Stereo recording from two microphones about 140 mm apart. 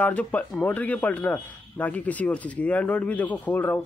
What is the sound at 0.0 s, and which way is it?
Speech, 10° left (ahead or behind).